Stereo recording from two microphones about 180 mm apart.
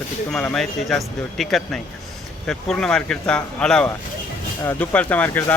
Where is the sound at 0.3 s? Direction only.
5° left (ahead or behind).